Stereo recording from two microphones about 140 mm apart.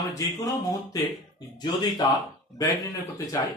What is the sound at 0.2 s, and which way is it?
Speech, 20° left (ahead or behind).